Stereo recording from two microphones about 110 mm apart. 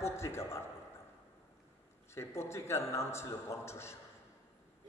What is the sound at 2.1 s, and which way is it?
A man's voice, 25° left (ahead or behind).